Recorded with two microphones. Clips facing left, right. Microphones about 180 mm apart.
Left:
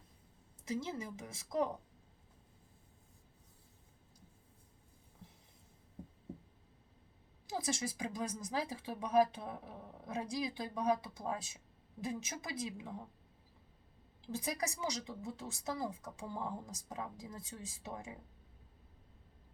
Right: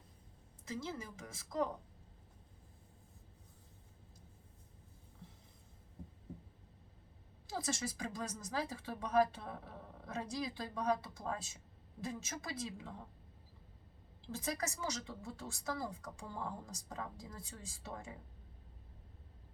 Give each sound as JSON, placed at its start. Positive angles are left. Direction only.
{"t": 0.7, "sound": "a woman's voice", "side_deg": 20}
{"t": 7.5, "sound": "speech", "side_deg": 15}
{"t": 14.3, "sound": "speech", "side_deg": 15}